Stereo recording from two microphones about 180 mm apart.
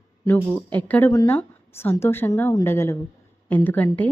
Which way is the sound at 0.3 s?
10° left (ahead or behind).